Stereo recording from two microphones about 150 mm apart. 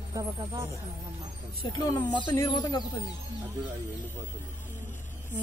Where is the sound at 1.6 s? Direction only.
25° left (ahead or behind).